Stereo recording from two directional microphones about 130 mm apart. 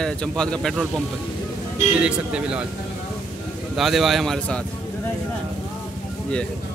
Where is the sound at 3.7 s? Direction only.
Centre (ahead or behind).